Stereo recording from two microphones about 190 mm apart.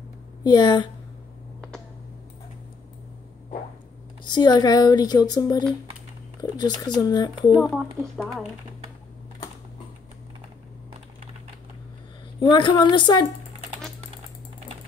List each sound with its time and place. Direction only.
0.4 s speech: 20° left (ahead or behind)
4.2 s speech: 20° left (ahead or behind)
7.5 s speech: centre (ahead or behind)
12.4 s speech: 25° left (ahead or behind)